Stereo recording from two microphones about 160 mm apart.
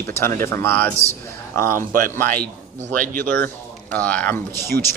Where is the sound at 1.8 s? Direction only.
60° right (ahead or behind).